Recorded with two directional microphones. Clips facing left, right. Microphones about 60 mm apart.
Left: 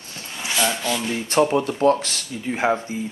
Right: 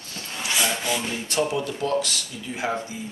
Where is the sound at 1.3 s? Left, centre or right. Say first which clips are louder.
Left 7 dB; left.